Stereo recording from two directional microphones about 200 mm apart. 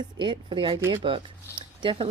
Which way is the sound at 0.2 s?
25° right (ahead or behind).